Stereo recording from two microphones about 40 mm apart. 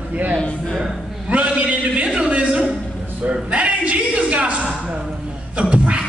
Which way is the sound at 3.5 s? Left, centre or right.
Right.